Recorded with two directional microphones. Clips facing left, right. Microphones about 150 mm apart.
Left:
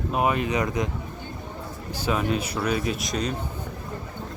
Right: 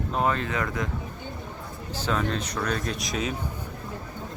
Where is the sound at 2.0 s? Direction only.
10° left (ahead or behind).